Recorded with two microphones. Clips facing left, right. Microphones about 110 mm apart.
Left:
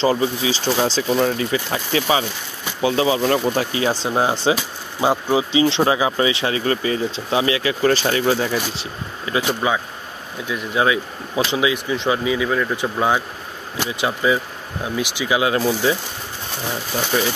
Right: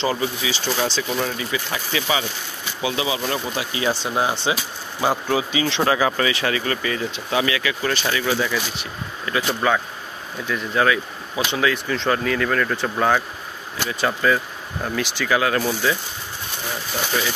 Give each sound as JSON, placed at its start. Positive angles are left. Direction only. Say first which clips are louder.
{"t": 0.0, "sound": "speech", "louder": "left 5 dB", "side_deg": 30}
{"t": 9.2, "sound": "speech", "louder": "left 1 dB", "side_deg": 20}